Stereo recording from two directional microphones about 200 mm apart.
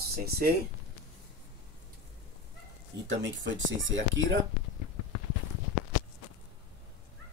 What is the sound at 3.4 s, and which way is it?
Speech, 70° right (ahead or behind).